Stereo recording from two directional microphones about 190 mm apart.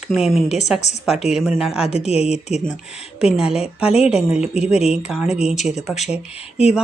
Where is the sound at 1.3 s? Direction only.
5° right (ahead or behind).